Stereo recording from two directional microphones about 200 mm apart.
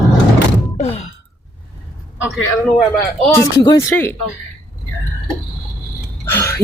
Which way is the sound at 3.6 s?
15° left (ahead or behind).